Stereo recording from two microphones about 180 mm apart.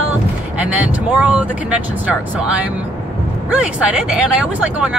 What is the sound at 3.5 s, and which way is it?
Speech, 5° right (ahead or behind).